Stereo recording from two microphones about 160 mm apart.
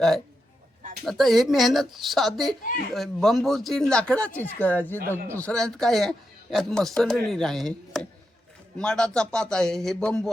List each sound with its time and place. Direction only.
1.0 s speech: centre (ahead or behind)